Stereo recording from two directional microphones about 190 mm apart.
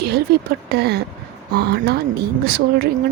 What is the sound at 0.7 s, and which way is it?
Speech, 60° right (ahead or behind).